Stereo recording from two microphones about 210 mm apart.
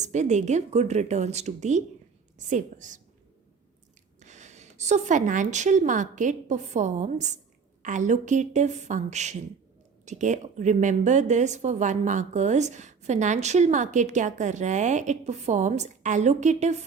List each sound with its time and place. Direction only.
0.0 s a woman's voice: 35° right (ahead or behind)
4.2 s a woman's voice: 35° right (ahead or behind)